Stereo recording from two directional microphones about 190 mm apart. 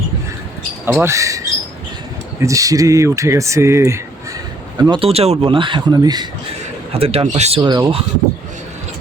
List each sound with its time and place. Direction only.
0.9 s speech: 15° right (ahead or behind)
2.4 s speech: 15° right (ahead or behind)
4.8 s speech: 25° right (ahead or behind)